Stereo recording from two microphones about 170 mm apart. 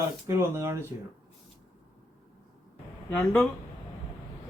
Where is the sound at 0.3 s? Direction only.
15° right (ahead or behind).